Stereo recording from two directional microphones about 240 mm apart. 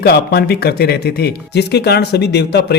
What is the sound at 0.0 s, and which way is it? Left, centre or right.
A man's voice, left.